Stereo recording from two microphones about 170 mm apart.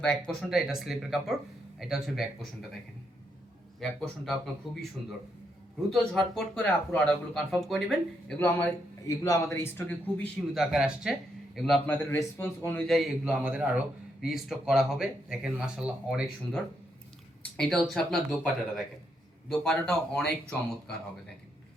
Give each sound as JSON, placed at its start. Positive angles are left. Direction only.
{"t": 0.0, "sound": "a man's voice", "side_deg": 5}
{"t": 3.8, "sound": "a man's voice", "side_deg": 5}
{"t": 6.3, "sound": "a man's voice", "side_deg": 5}
{"t": 10.5, "sound": "a man's voice", "side_deg": 0}
{"t": 12.0, "sound": "a man's voice", "side_deg": 10}
{"t": 17.6, "sound": "a man's voice", "side_deg": 5}